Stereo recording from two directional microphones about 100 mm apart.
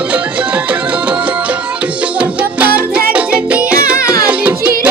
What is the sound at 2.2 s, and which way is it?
Music, 10° right (ahead or behind).